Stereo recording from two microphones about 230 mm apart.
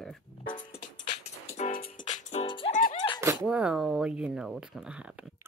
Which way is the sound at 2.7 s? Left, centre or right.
Left.